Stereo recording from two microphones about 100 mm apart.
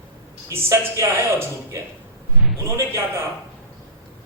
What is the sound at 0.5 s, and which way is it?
A man's voice, 25° right (ahead or behind).